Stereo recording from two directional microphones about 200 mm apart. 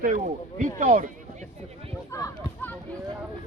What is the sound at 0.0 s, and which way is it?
Speech, 40° right (ahead or behind).